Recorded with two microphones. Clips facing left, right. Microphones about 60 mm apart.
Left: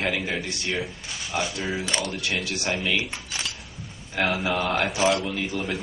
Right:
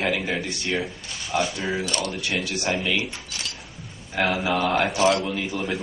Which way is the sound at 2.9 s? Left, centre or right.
Left.